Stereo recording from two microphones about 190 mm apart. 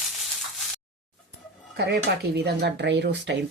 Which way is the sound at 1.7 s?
60° right (ahead or behind).